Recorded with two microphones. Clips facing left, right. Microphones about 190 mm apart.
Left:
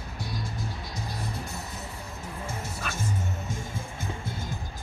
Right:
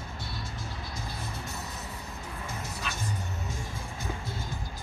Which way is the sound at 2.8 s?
50° left (ahead or behind).